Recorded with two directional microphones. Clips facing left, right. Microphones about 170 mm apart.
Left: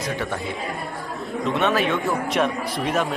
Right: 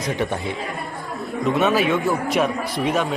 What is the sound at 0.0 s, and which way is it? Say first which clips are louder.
Speech: right 3 dB; 20° right (ahead or behind).